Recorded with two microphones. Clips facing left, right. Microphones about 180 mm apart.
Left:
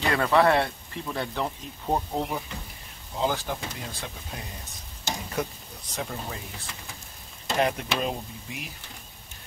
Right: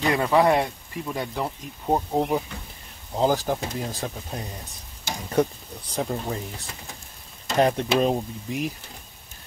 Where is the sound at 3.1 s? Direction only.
40° right (ahead or behind).